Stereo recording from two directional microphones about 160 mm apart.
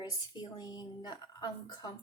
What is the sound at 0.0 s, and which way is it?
A child's voice, 25° left (ahead or behind).